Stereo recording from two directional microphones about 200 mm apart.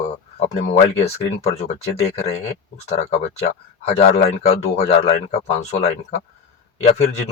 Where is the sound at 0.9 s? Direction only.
30° left (ahead or behind).